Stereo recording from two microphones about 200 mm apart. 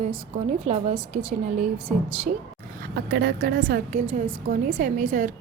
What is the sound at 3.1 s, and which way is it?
Speech, 55° right (ahead or behind).